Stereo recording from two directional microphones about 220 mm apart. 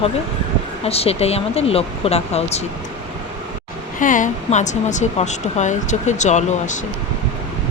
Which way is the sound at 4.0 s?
35° left (ahead or behind).